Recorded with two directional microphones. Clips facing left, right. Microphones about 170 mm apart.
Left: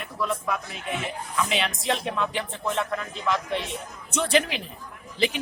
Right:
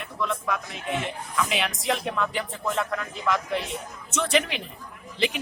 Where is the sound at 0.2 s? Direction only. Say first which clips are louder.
Even; 5° left (ahead or behind).